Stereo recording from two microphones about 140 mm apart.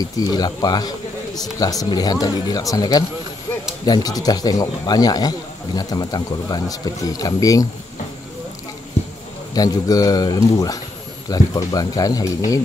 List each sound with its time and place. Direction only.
0.0 s speech: 30° left (ahead or behind)
9.5 s speech: 25° left (ahead or behind)